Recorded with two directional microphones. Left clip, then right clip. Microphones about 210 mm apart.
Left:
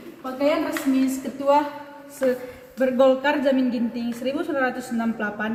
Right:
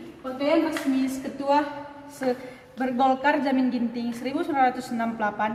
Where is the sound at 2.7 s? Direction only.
20° right (ahead or behind).